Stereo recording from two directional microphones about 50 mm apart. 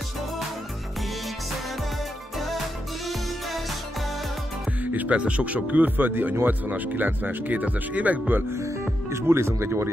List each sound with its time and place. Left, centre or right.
4.9 s speech: right
9.1 s speech: right